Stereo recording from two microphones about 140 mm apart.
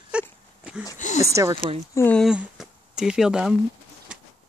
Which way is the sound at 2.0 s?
10° left (ahead or behind).